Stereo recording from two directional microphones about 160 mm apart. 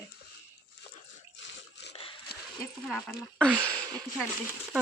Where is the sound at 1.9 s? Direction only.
35° left (ahead or behind).